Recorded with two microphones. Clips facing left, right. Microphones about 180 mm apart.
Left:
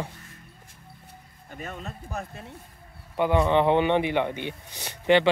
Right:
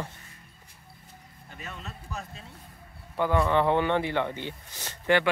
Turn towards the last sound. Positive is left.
turn(degrees=20)  # may be behind; listen again after turning